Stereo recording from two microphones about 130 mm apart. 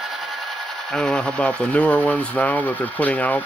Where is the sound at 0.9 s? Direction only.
10° left (ahead or behind).